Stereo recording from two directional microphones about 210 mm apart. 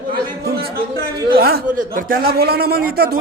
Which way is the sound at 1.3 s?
45° right (ahead or behind).